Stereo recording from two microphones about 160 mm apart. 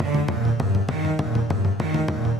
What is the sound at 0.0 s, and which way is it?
Music, centre (ahead or behind).